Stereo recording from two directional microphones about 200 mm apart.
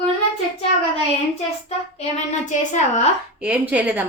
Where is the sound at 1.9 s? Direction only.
35° left (ahead or behind).